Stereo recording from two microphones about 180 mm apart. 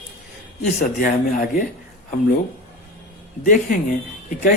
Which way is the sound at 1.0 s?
50° left (ahead or behind).